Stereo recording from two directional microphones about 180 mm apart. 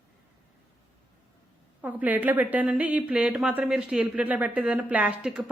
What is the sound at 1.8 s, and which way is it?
A woman's voice, 10° right (ahead or behind).